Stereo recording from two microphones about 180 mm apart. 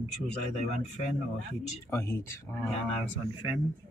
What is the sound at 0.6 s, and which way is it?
Speech, 40° left (ahead or behind).